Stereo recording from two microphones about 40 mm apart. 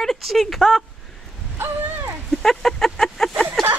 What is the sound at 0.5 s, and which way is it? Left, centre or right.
Speech, centre.